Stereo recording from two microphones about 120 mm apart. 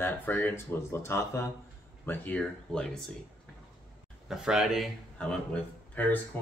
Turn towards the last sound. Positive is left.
turn(degrees=15)  # may be behind; listen again after turning